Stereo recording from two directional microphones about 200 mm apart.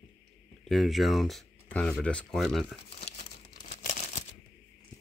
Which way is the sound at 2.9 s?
35° left (ahead or behind).